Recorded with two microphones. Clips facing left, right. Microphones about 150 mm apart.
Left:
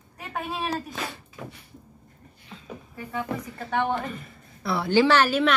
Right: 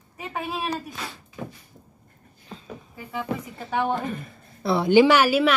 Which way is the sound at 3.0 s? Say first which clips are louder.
Right 1 dB; 5° right (ahead or behind).